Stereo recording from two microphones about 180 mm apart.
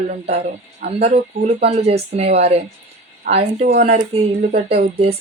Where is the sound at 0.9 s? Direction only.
35° right (ahead or behind).